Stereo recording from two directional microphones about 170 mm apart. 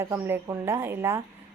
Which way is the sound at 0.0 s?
15° right (ahead or behind).